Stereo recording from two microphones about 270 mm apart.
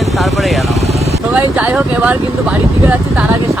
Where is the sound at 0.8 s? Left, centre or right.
Right.